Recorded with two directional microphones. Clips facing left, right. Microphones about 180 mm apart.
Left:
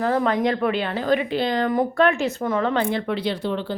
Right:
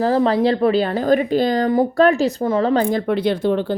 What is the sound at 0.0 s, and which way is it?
Speech, 30° right (ahead or behind).